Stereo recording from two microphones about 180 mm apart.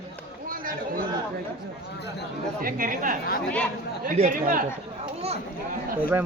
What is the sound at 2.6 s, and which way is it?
Speech, 50° right (ahead or behind).